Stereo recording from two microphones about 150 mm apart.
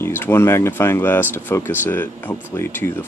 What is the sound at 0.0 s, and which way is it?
Speech, 15° left (ahead or behind).